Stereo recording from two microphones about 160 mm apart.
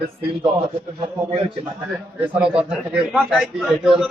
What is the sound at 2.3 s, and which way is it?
A man's voice, 5° right (ahead or behind).